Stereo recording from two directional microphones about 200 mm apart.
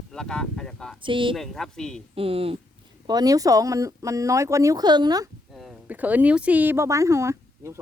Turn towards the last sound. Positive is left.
turn(degrees=-15)  # may be behind; listen again after turning